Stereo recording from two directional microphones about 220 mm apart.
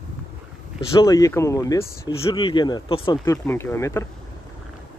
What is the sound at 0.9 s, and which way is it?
Speech, 15° left (ahead or behind).